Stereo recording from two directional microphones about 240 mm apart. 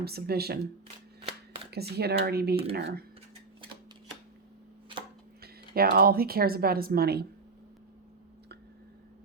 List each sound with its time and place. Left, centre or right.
0.0 s speech: right
1.7 s speech: right
5.4 s speech: right